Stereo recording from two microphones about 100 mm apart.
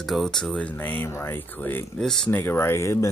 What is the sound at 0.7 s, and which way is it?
Speech, 20° left (ahead or behind).